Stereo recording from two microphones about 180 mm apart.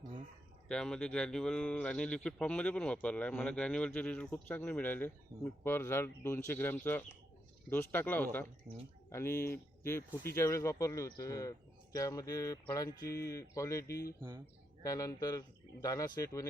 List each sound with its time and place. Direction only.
0.7 s speech: 5° left (ahead or behind)
14.2 s speech: 15° right (ahead or behind)
14.8 s speech: 20° left (ahead or behind)